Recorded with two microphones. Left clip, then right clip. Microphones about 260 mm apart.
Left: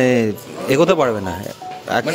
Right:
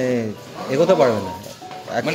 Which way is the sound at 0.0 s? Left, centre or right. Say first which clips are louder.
Left 6 dB; left.